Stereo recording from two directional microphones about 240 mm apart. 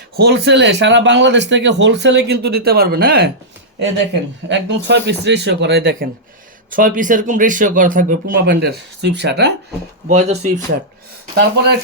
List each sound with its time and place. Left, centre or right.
0.2 s speech: right
4.4 s speech: right
10.1 s speech: right
11.3 s speech: right